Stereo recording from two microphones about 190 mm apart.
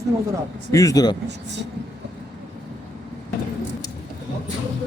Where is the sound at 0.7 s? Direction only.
15° left (ahead or behind).